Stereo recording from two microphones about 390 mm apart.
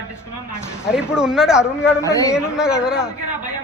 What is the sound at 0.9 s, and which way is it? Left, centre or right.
A man's voice, centre.